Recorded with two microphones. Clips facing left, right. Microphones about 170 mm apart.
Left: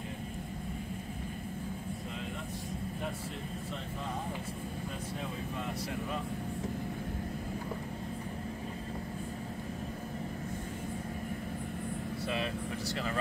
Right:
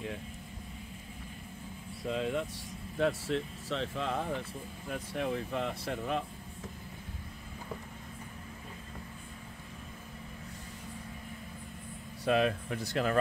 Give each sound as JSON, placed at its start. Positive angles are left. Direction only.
{"t": 2.0, "sound": "air conditioning", "side_deg": -90}
{"t": 3.0, "sound": "speech", "side_deg": -85}
{"t": 5.1, "sound": "speech", "side_deg": -70}
{"t": 12.3, "sound": "speech", "side_deg": -60}